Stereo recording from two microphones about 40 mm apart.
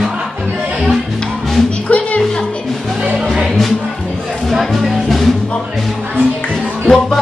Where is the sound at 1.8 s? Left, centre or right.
Left.